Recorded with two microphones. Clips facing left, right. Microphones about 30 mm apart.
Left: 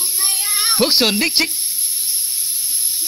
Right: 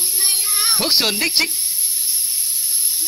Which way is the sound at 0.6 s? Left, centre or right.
Centre.